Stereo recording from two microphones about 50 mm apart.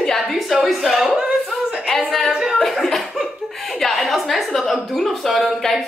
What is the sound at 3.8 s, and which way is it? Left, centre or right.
A woman's voice, centre.